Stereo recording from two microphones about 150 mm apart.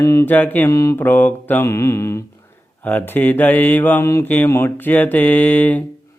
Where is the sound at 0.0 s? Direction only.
20° left (ahead or behind).